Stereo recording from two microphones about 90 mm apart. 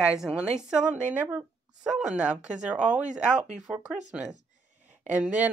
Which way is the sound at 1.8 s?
10° right (ahead or behind).